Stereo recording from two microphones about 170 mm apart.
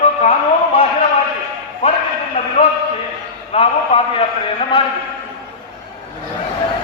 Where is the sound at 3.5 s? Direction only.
35° left (ahead or behind).